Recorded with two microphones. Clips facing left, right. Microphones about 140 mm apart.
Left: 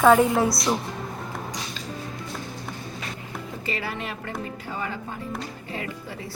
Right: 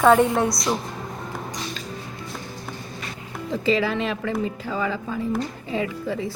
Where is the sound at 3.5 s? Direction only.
90° right.